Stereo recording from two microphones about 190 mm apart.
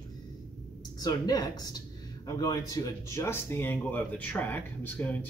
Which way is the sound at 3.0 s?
15° left (ahead or behind).